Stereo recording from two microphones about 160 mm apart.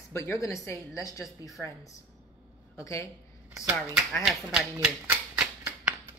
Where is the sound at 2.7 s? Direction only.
20° left (ahead or behind).